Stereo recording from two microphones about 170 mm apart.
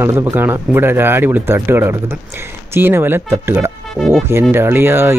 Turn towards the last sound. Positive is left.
turn(degrees=-15)  # may be behind; listen again after turning